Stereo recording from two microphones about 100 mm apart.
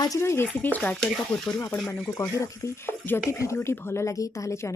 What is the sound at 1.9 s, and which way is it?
Speech, 25° left (ahead or behind).